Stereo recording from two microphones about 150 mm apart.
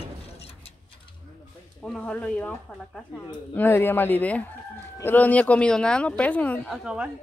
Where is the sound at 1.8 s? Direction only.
5° left (ahead or behind).